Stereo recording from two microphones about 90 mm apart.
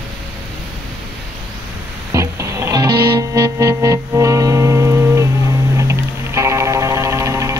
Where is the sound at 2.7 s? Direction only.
45° right (ahead or behind).